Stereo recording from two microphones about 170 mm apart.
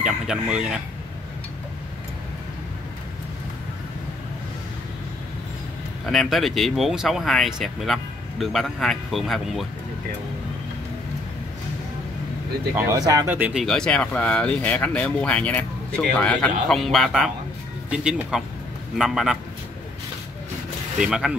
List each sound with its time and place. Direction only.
0.0 s speech: 5° right (ahead or behind)
6.0 s speech: centre (ahead or behind)
12.7 s speech: 20° right (ahead or behind)
13.3 s speech: 5° right (ahead or behind)
21.0 s speech: 5° right (ahead or behind)